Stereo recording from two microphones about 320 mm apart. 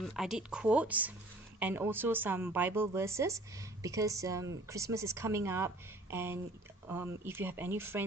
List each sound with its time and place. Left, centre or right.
0.0 s a woman's voice: centre